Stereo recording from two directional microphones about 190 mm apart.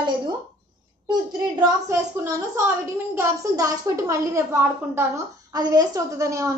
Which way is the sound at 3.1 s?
15° right (ahead or behind).